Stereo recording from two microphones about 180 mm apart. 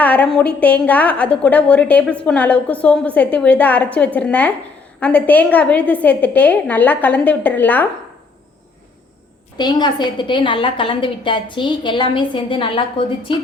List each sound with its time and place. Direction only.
0.0 s a woman's voice: 5° left (ahead or behind)
9.6 s a woman's voice: 25° left (ahead or behind)